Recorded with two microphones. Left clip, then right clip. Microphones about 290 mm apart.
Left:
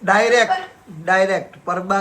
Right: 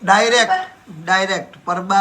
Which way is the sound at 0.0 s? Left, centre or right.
Centre.